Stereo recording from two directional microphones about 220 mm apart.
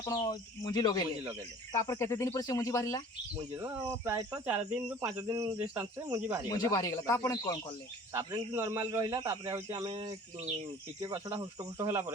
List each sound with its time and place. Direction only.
0.0 s speech: 15° left (ahead or behind)
3.6 s speech: 25° right (ahead or behind)
4.0 s a man's voice: 10° right (ahead or behind)
6.5 s speech: 15° left (ahead or behind)
8.1 s a man's voice: 15° right (ahead or behind)